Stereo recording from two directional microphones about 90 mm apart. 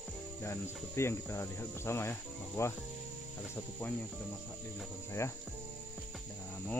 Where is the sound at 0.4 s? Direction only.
30° left (ahead or behind).